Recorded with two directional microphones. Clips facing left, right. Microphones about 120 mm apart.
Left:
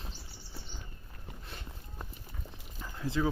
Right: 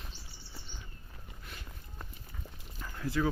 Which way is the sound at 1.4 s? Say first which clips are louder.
Left 1 dB; 30° left (ahead or behind).